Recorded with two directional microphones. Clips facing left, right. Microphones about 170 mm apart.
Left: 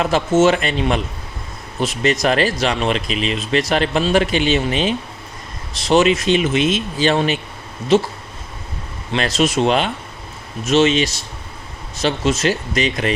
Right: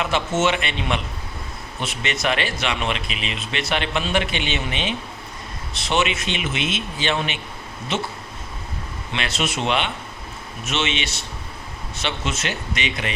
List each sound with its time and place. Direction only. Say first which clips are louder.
0.0 s speech: left 7 dB; 40° left (ahead or behind)
9.1 s speech: left 8 dB; 40° left (ahead or behind)